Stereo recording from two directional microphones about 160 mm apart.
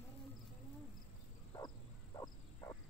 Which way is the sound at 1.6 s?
25° left (ahead or behind).